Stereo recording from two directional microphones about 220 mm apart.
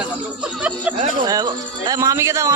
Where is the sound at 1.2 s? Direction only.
15° right (ahead or behind).